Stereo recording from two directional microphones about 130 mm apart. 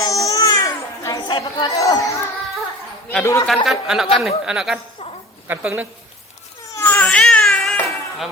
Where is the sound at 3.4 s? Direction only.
Centre (ahead or behind).